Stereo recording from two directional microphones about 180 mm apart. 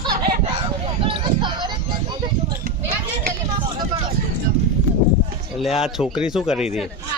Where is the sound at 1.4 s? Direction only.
25° right (ahead or behind).